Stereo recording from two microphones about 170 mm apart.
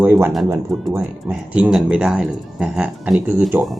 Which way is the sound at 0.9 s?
10° right (ahead or behind).